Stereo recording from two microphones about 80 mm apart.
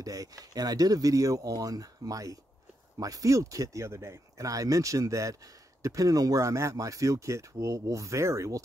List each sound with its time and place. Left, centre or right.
0.0 s speech: right